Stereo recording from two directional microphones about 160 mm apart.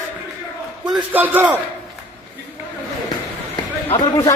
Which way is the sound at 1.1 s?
10° right (ahead or behind).